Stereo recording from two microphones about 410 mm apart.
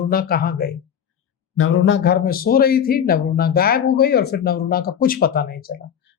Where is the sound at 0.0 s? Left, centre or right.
Left.